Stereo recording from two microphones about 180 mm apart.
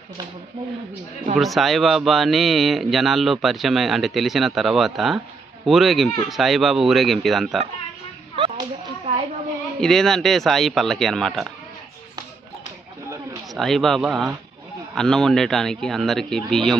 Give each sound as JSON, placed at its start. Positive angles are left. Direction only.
{"t": 1.3, "sound": "speech", "side_deg": 0}
{"t": 8.4, "sound": "a sound", "side_deg": -30}
{"t": 9.8, "sound": "speech", "side_deg": 0}
{"t": 13.6, "sound": "speech", "side_deg": 0}